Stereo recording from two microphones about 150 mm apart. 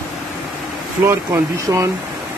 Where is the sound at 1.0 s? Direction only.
15° right (ahead or behind).